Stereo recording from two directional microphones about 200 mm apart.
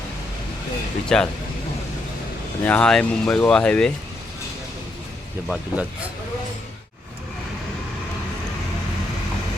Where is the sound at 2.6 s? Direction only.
5° left (ahead or behind).